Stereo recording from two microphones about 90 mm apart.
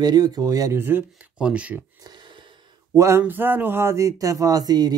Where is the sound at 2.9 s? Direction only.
35° right (ahead or behind).